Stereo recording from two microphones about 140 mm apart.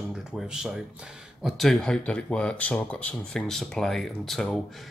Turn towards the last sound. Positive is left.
turn(degrees=0)  # may be behind; listen again after turning